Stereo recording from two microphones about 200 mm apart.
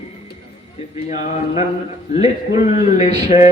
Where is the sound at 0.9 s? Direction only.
30° left (ahead or behind).